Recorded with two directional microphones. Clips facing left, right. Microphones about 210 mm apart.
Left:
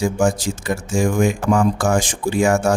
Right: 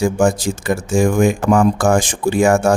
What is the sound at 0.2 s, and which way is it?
Speech, 55° right (ahead or behind).